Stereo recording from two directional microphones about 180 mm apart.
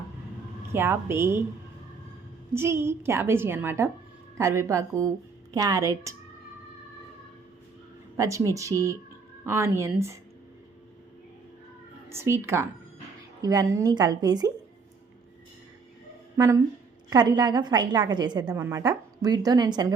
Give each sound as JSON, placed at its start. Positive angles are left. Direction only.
{"t": 0.7, "sound": "a woman's voice", "side_deg": -15}
{"t": 2.5, "sound": "a woman's voice", "side_deg": -15}
{"t": 8.1, "sound": "a woman's voice", "side_deg": -15}
{"t": 12.0, "sound": "a woman's voice", "side_deg": -15}
{"t": 16.4, "sound": "a woman's voice", "side_deg": -15}